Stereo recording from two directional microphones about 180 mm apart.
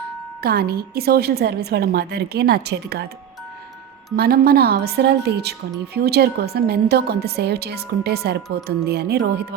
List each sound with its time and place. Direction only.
0.4 s a woman's voice: 60° right (ahead or behind)
4.1 s a woman's voice: 55° right (ahead or behind)